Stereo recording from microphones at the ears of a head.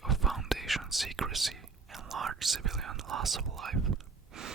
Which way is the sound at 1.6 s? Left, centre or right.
Right.